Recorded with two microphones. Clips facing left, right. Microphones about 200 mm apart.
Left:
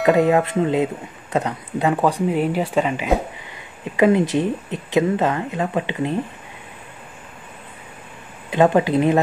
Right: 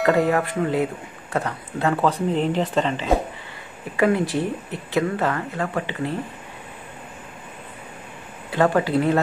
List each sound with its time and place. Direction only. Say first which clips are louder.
0.0 s speech: left 3 dB; 20° left (ahead or behind)
3.9 s speech: left 4 dB; 20° left (ahead or behind)
8.5 s speech: left 4 dB; 20° left (ahead or behind)